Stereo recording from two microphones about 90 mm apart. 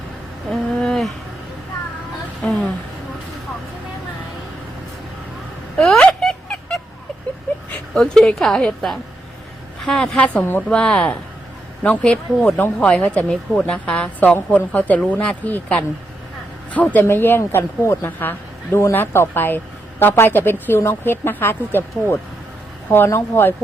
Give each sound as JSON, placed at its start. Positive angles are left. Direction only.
{"t": 0.5, "sound": "wild animals", "side_deg": 5}
{"t": 2.4, "sound": "a woman's voice", "side_deg": 0}
{"t": 5.7, "sound": "a sound", "side_deg": 5}
{"t": 7.9, "sound": "a woman's voice", "side_deg": 5}